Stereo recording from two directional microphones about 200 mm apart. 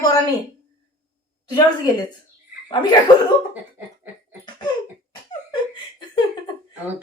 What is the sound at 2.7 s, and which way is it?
Speech, 20° left (ahead or behind).